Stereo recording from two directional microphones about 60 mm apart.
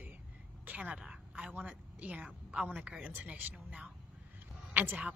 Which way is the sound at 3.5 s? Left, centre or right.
Centre.